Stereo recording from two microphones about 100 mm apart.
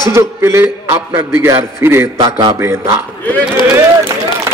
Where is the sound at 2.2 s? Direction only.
40° right (ahead or behind).